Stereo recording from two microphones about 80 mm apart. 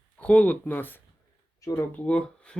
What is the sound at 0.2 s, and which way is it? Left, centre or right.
Speech, centre.